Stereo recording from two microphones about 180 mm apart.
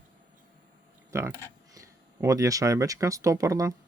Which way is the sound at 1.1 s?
15° right (ahead or behind).